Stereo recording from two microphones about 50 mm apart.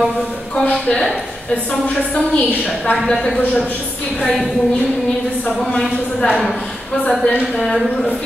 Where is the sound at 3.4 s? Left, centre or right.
Left.